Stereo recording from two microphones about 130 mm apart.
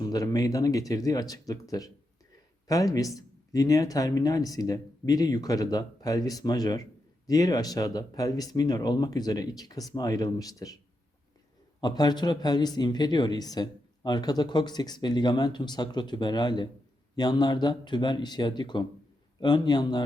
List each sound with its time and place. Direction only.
0.0 s speech: 30° left (ahead or behind)
11.8 s speech: 30° left (ahead or behind)